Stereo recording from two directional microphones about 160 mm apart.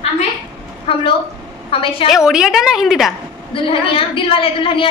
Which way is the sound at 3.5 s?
35° left (ahead or behind).